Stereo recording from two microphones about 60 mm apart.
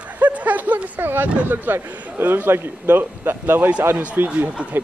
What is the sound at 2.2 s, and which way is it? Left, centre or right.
A man's voice, right.